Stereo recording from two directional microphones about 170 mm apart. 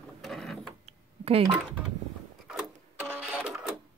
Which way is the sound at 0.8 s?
35° right (ahead or behind).